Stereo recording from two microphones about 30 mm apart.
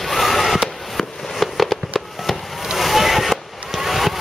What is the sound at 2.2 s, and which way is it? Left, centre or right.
Chop, centre.